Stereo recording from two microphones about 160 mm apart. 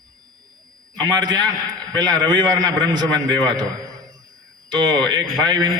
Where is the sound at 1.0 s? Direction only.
25° right (ahead or behind).